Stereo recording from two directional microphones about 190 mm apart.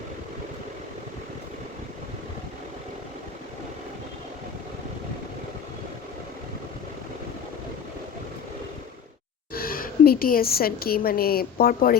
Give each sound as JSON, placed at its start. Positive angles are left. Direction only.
{"t": 9.5, "sound": "a woman's voice", "side_deg": 50}